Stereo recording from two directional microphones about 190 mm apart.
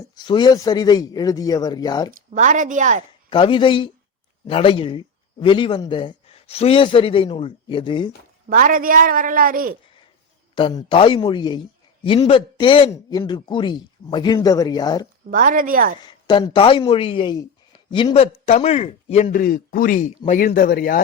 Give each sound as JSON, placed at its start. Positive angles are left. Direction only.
{"t": 0.3, "sound": "speech", "side_deg": 25}
{"t": 2.3, "sound": "a woman's voice", "side_deg": -45}
{"t": 3.2, "sound": "speech", "side_deg": 25}
{"t": 8.4, "sound": "a woman's voice", "side_deg": -45}
{"t": 10.5, "sound": "speech", "side_deg": 25}
{"t": 15.3, "sound": "a woman's voice", "side_deg": -45}
{"t": 16.0, "sound": "a man's voice", "side_deg": 25}
{"t": 19.4, "sound": "speech", "side_deg": 50}